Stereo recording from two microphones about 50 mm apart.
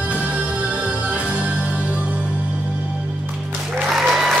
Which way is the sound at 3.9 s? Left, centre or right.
Centre.